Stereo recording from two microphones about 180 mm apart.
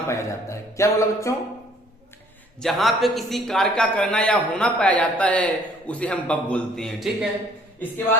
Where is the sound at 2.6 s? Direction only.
Centre (ahead or behind).